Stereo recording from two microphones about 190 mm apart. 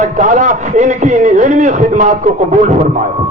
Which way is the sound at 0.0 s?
40° right (ahead or behind).